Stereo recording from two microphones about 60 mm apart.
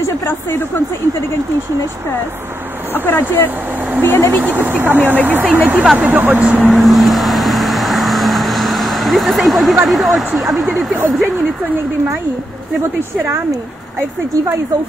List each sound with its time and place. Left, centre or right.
2.9 s speech: left
4.4 s speech: right
6.7 s vehicle: centre
9.8 s speech: centre